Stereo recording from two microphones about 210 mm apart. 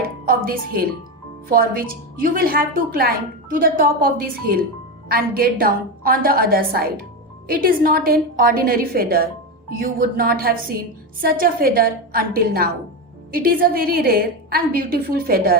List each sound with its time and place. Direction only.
0.3 s a woman's voice: 45° right (ahead or behind)